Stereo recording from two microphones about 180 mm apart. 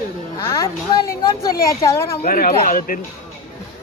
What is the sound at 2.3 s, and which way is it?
Speech, 55° left (ahead or behind).